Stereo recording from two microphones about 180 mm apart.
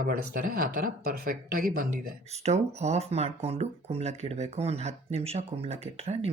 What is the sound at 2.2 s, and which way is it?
Speech, 35° right (ahead or behind).